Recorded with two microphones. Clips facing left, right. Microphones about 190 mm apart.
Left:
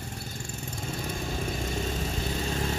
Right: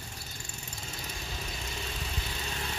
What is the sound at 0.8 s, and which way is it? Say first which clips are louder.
Vehicle: left 10 dB; 50° left (ahead or behind).